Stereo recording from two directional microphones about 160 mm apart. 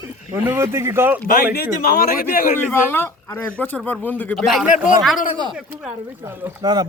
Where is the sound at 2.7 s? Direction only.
15° left (ahead or behind).